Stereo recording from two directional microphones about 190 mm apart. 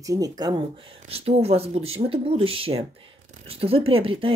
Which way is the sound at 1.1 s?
30° right (ahead or behind).